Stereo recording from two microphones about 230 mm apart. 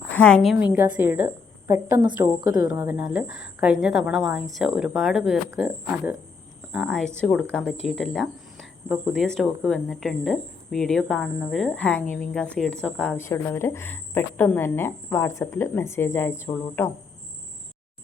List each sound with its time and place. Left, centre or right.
0.1 s a woman's voice: centre
0.5 s a woman's voice: centre